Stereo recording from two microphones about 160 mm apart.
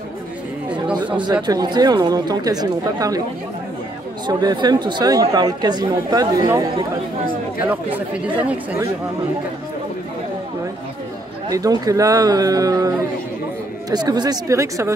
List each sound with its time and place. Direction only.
1.2 s speech: 25° right (ahead or behind)
4.3 s speech: 25° right (ahead or behind)
7.6 s speech: 10° right (ahead or behind)
11.4 s speech: 20° right (ahead or behind)